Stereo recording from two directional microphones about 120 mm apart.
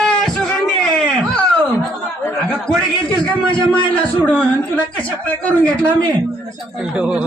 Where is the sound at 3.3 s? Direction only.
10° left (ahead or behind).